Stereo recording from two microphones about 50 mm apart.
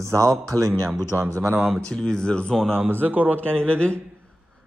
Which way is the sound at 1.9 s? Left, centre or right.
Centre.